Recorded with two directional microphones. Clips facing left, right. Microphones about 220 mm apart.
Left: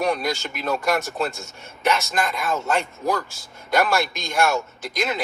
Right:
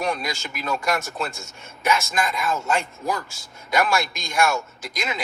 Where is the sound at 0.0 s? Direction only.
Centre (ahead or behind).